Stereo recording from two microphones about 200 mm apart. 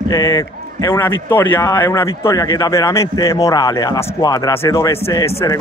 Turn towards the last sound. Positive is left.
turn(degrees=15)  # may be behind; listen again after turning